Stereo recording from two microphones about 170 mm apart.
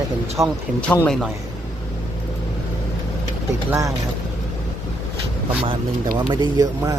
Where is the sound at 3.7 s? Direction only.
20° right (ahead or behind).